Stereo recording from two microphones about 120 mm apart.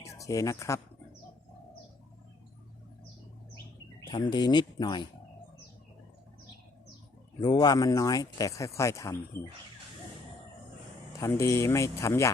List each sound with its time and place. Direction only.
0.0 s speech: 25° left (ahead or behind)
4.0 s speech: 35° left (ahead or behind)
7.3 s speech: 35° left (ahead or behind)
11.3 s speech: 25° left (ahead or behind)